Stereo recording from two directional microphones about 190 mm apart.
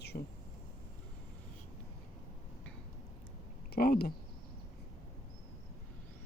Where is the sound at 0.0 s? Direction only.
60° left (ahead or behind).